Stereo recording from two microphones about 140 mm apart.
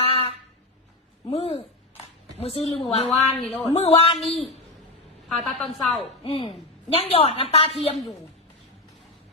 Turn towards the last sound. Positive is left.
turn(degrees=45)  # may be behind; listen again after turning